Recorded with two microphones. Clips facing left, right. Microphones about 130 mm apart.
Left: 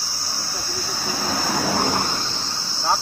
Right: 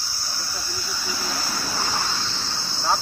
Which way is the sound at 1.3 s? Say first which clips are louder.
Left 10 dB; 75° left (ahead or behind).